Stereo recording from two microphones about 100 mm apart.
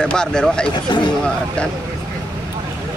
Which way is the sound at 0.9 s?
50° left (ahead or behind).